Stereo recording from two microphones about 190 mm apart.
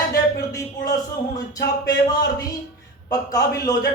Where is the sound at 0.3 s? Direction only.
20° left (ahead or behind).